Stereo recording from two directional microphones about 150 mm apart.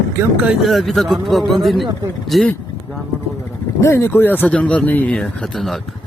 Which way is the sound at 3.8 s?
15° left (ahead or behind).